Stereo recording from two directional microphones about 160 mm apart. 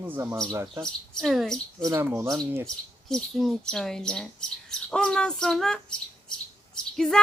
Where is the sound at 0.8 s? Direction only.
Centre (ahead or behind).